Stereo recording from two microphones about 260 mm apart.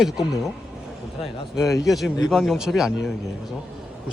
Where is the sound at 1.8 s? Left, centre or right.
Centre.